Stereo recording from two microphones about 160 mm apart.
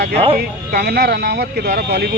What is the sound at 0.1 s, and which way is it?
Speech, 35° right (ahead or behind).